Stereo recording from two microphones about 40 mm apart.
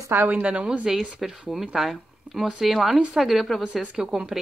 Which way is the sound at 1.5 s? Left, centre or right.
Centre.